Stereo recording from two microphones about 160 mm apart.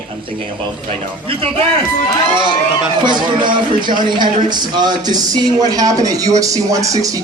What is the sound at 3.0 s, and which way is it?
Speech, 30° right (ahead or behind).